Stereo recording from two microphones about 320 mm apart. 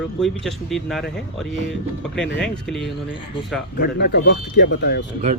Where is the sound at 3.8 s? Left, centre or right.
Left.